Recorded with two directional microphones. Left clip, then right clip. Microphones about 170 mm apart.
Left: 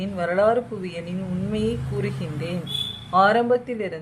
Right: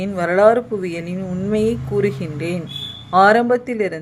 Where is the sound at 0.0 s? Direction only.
30° right (ahead or behind).